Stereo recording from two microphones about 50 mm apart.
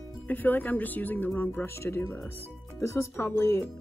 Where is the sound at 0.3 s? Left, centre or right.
Left.